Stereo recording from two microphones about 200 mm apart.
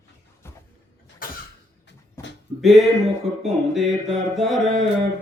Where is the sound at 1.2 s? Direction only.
45° left (ahead or behind).